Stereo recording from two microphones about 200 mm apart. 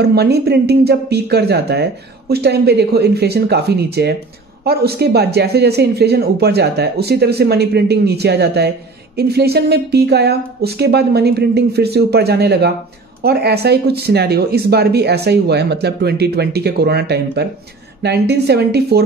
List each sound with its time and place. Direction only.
0.0 s speech: 55° right (ahead or behind)